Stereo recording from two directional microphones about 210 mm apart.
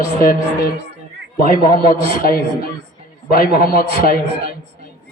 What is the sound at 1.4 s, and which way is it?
Music, 40° left (ahead or behind).